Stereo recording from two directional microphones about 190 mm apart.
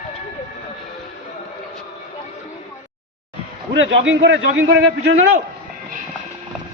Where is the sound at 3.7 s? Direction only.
80° right; by 5.1 s 60° right (ahead or behind).